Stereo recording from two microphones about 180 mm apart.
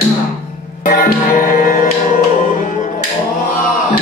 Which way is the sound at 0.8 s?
50° left (ahead or behind).